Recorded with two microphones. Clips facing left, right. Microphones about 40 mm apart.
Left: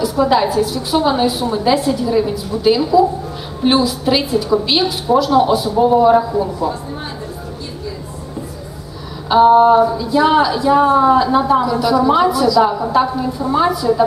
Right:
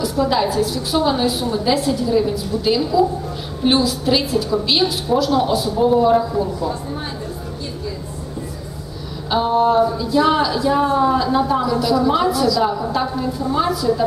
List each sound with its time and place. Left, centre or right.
0.0 s speech: centre
9.3 s speech: centre